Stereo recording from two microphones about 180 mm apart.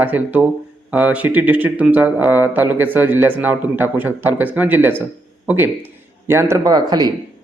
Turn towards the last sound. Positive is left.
turn(degrees=-20)  # may be behind; listen again after turning